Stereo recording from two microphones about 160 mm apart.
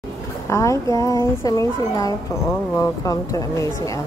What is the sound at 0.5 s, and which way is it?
Speech, 20° left (ahead or behind).